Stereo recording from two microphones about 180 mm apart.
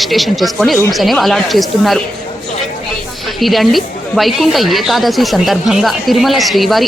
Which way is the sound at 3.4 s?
Centre (ahead or behind).